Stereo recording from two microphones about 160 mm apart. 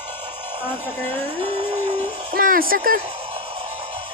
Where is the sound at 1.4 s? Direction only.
35° right (ahead or behind).